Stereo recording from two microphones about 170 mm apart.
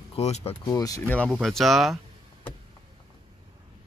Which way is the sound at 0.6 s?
20° left (ahead or behind).